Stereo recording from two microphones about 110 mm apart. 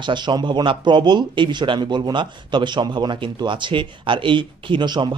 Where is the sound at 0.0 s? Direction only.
45° right (ahead or behind).